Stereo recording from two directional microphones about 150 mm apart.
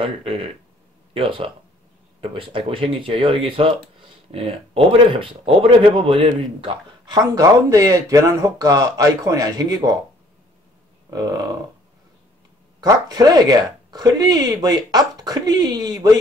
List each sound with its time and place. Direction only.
0.0 s speech: 40° right (ahead or behind)
12.8 s speech: 25° right (ahead or behind)